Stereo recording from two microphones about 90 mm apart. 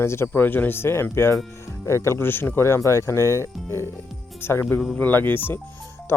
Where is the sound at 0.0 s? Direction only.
30° left (ahead or behind).